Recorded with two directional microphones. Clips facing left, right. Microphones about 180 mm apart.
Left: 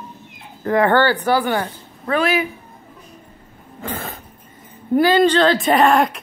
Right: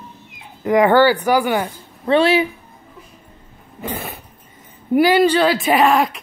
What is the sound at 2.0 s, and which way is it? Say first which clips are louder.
Speech: right 4 dB; 30° right (ahead or behind).